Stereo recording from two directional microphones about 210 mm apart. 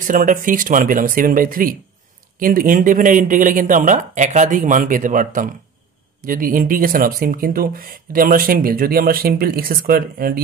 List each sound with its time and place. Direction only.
0.0 s speech: 40° right (ahead or behind)